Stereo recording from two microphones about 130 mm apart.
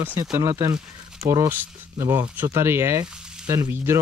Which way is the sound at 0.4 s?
25° right (ahead or behind).